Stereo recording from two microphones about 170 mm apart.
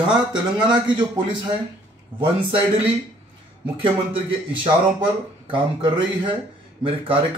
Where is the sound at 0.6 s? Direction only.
30° right (ahead or behind).